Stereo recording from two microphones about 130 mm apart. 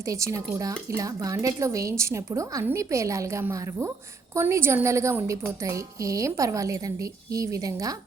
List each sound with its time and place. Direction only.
0.0 s a woman's voice: 25° right (ahead or behind)